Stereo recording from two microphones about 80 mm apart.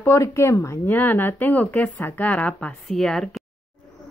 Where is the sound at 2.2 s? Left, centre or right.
Centre.